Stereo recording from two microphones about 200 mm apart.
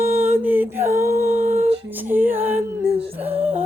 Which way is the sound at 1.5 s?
35° right (ahead or behind).